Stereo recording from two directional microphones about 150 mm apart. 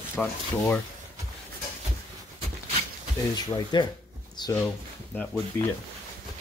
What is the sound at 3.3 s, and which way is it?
Speech, 30° left (ahead or behind).